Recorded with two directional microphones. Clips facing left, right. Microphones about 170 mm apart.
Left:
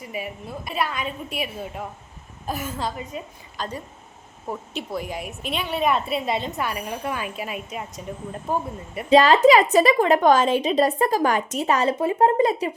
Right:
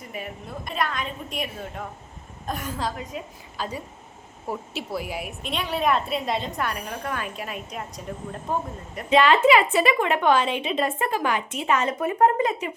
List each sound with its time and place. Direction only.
0.1 s a woman's voice: 5° left (ahead or behind)
3.6 s a woman's voice: 10° right (ahead or behind)
9.0 s a woman's voice: 35° left (ahead or behind)